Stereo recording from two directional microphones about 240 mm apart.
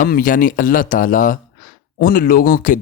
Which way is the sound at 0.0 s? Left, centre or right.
Left.